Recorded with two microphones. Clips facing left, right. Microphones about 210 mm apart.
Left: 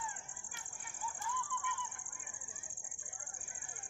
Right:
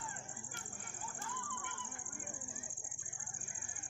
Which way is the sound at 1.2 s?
50° right (ahead or behind).